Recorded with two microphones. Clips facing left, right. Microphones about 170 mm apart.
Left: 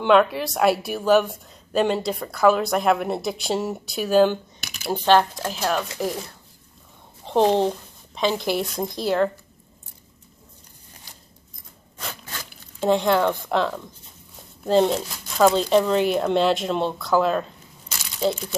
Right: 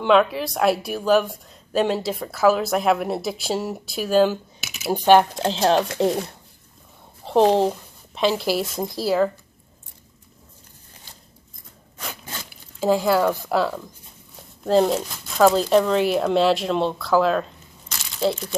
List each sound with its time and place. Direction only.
0.0 s a woman's voice: centre (ahead or behind)
5.4 s speech: 25° right (ahead or behind)
7.2 s speech: centre (ahead or behind)
12.8 s a woman's voice: 5° right (ahead or behind)